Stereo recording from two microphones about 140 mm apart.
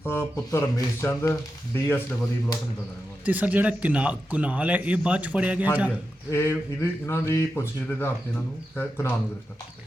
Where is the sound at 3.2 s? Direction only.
10° right (ahead or behind).